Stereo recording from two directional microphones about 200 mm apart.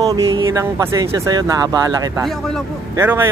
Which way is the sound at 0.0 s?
20° right (ahead or behind).